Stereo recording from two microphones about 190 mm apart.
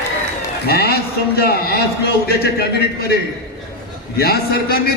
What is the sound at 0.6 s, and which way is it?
A man's voice, 55° left (ahead or behind).